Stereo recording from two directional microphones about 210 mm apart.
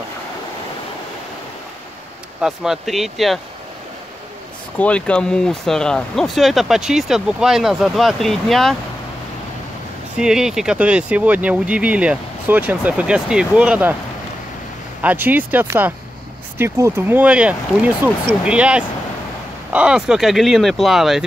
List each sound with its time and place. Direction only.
2.4 s speech: centre (ahead or behind)
4.7 s speech: 5° left (ahead or behind)
10.1 s speech: 5° right (ahead or behind)
15.0 s speech: 10° right (ahead or behind)